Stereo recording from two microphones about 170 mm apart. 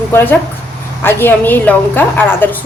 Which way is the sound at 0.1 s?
15° left (ahead or behind).